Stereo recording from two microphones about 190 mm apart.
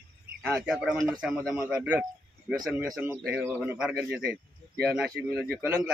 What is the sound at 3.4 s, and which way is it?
A man's voice, 10° right (ahead or behind).